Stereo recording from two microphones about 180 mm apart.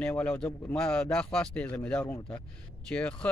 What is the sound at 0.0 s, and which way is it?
Speech, 10° left (ahead or behind).